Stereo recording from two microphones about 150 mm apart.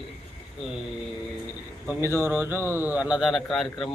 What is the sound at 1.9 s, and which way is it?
A man's voice, 15° right (ahead or behind).